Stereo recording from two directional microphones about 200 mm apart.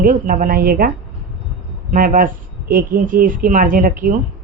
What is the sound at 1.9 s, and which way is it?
Speech, 45° right (ahead or behind).